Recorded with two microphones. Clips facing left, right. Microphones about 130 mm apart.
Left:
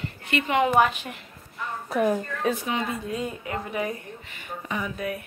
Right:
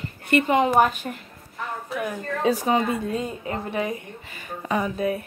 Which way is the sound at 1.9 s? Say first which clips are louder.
Left 6 dB; 40° left (ahead or behind).